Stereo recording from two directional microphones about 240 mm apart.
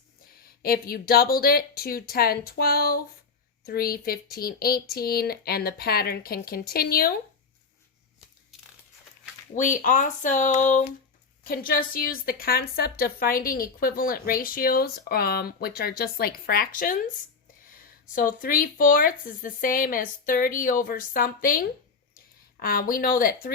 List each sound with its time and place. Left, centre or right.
0.6 s a woman's voice: left
9.6 s a woman's voice: left
18.1 s a woman's voice: left